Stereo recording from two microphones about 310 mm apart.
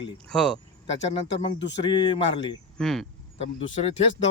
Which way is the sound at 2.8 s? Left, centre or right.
Centre.